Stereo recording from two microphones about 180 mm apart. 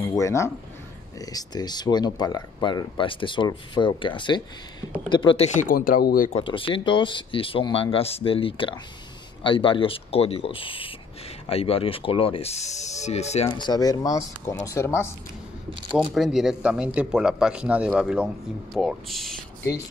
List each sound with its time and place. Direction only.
0.0 s speech: 15° left (ahead or behind)
5.6 s speech: 50° left (ahead or behind)
6.3 s speech: 30° left (ahead or behind)
13.5 s speech: 25° left (ahead or behind)
15.9 s speech: centre (ahead or behind)